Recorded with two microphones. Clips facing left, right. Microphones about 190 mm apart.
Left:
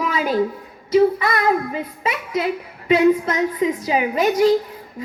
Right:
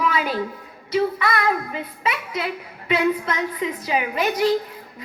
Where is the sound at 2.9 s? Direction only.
40° left (ahead or behind).